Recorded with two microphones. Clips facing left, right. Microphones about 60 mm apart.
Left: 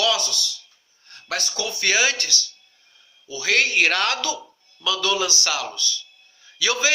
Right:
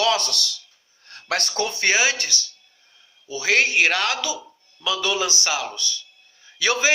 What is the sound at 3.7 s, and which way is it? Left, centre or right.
Speech, centre.